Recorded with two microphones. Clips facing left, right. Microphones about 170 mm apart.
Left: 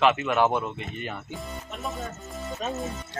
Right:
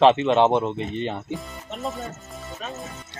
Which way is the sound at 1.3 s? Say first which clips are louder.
Right 4 dB; centre (ahead or behind).